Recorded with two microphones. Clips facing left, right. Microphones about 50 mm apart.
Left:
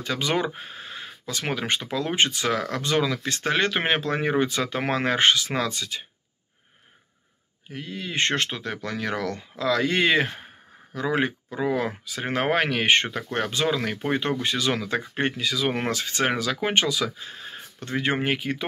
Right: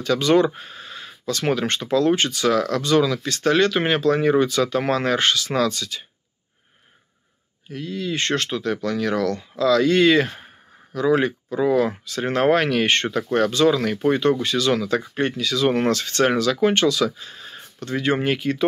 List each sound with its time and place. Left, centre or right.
0.0 s speech: centre
7.7 s speech: left
15.5 s speech: centre